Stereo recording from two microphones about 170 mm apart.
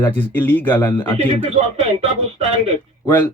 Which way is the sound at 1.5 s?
40° right (ahead or behind).